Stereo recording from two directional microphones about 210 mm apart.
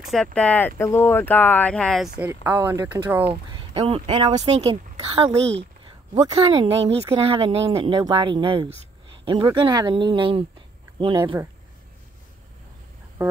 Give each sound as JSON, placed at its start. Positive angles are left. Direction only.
{"t": 0.1, "sound": "speech", "side_deg": 5}
{"t": 3.5, "sound": "speech", "side_deg": -25}
{"t": 7.0, "sound": "speech", "side_deg": -15}
{"t": 7.2, "sound": "speech", "side_deg": -25}